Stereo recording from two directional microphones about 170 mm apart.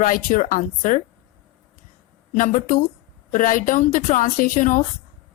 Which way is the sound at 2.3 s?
50° left (ahead or behind).